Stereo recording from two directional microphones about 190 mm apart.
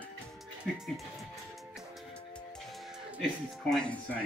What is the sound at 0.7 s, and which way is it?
Speech, centre (ahead or behind).